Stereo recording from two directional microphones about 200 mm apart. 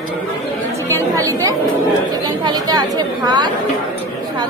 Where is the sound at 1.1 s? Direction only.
15° right (ahead or behind).